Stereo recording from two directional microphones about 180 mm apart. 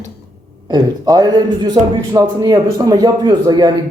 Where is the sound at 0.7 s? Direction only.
20° right (ahead or behind).